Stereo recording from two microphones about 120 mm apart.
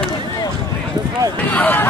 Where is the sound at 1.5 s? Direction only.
15° left (ahead or behind).